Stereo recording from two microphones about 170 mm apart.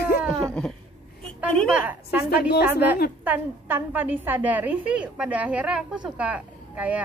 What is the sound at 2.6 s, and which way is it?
A woman's voice, 10° right (ahead or behind).